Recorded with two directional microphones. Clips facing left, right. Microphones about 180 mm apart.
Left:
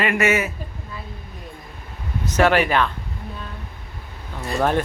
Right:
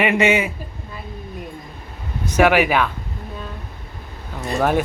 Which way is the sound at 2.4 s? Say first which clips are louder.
Right 2 dB; 10° right (ahead or behind).